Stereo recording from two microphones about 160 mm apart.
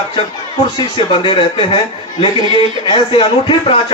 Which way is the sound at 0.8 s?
30° left (ahead or behind).